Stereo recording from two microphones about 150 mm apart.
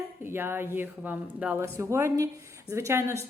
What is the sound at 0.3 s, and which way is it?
A woman's voice, 15° right (ahead or behind).